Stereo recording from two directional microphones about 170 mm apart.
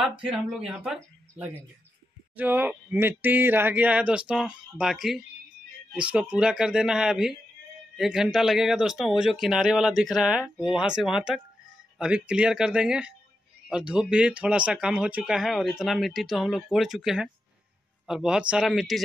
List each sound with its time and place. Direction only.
0.2 s speech: 5° right (ahead or behind)